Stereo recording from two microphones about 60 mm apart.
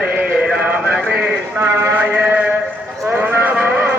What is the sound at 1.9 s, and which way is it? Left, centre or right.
Mantra, right.